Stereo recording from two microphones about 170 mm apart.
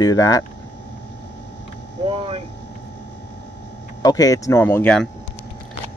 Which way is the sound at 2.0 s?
35° right (ahead or behind).